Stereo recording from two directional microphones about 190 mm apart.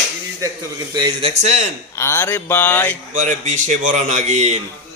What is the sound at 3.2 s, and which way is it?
A man's voice, 40° right (ahead or behind).